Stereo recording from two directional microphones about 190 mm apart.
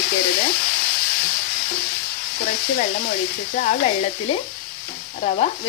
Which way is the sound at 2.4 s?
45° left (ahead or behind).